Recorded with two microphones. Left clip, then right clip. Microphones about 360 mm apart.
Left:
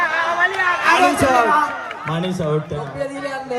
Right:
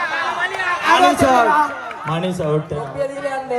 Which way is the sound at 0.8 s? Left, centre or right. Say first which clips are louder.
Right 3 dB; right.